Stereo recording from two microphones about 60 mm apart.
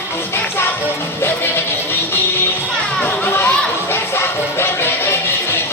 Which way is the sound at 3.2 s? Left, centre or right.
Left.